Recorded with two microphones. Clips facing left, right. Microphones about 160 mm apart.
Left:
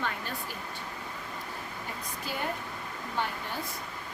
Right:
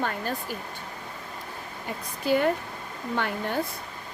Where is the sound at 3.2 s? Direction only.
70° right (ahead or behind).